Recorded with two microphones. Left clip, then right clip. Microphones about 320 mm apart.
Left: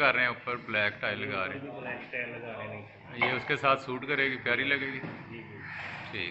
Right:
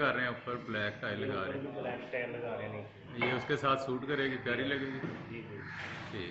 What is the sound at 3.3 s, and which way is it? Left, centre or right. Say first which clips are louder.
A man's voice: left 4 dB; centre.